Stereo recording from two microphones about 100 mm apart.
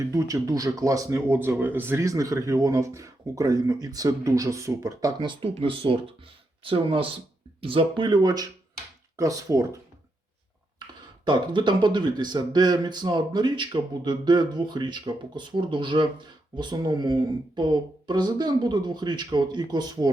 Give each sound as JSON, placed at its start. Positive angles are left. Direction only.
{"t": 0.0, "sound": "speech", "side_deg": -30}
{"t": 1.3, "sound": "speech", "side_deg": -20}
{"t": 5.2, "sound": "speech", "side_deg": -55}
{"t": 5.5, "sound": "speech", "side_deg": -65}
{"t": 11.3, "sound": "speech", "side_deg": -50}